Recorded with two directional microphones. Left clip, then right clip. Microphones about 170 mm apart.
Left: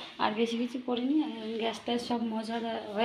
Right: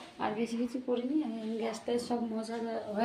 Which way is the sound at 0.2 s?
10° left (ahead or behind).